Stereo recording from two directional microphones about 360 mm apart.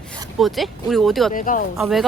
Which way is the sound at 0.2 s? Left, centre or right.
Centre.